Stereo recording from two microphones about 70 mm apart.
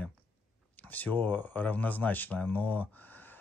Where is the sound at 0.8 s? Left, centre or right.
Left.